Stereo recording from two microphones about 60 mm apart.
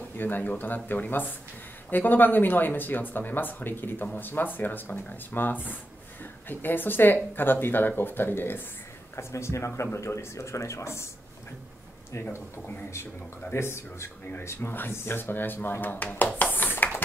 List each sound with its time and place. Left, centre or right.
0.2 s speech: left
9.1 s speech: left
12.1 s speech: left
16.5 s a sound: left